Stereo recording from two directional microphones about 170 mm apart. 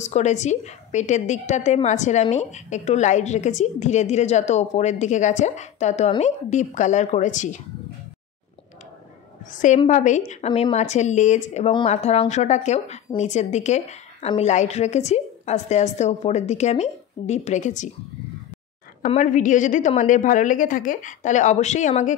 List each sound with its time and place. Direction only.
0.0 s a woman's voice: 45° left (ahead or behind)
9.5 s a woman's voice: 50° left (ahead or behind)
19.0 s a woman's voice: 45° left (ahead or behind)